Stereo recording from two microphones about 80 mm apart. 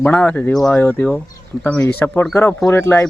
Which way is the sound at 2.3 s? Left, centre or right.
Left.